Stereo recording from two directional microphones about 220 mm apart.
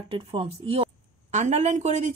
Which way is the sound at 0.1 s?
25° right (ahead or behind).